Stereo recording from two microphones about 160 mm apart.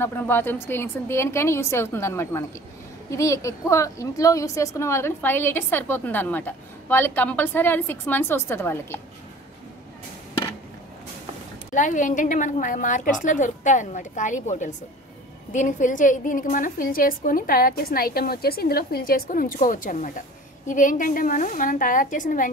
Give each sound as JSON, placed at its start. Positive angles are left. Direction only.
{"t": 0.0, "sound": "a woman's voice", "side_deg": 15}
{"t": 11.7, "sound": "a woman's voice", "side_deg": 50}